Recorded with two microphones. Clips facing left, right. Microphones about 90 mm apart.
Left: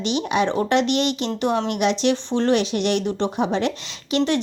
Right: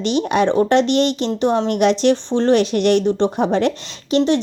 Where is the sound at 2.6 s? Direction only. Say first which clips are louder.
Right 6 dB; 45° right (ahead or behind).